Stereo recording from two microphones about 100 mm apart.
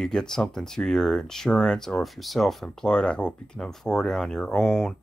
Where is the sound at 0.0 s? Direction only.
5° left (ahead or behind).